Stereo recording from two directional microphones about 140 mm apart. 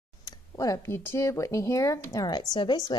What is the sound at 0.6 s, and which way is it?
A woman's voice, 20° left (ahead or behind).